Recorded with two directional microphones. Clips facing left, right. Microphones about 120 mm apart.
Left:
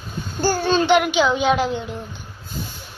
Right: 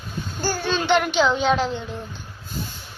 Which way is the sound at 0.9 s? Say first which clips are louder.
Right 1 dB; 5° left (ahead or behind).